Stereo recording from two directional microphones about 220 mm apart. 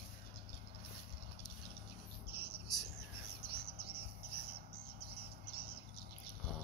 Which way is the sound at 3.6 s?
45° right (ahead or behind).